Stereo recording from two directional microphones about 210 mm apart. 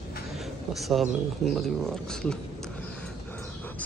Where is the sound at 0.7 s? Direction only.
Centre (ahead or behind).